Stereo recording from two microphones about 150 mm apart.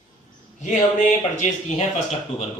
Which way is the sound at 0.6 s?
55° left (ahead or behind).